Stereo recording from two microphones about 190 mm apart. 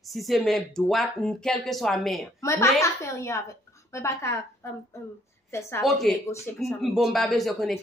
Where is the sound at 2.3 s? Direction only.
15° left (ahead or behind).